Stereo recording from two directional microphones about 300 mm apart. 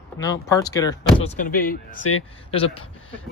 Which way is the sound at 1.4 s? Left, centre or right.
Left.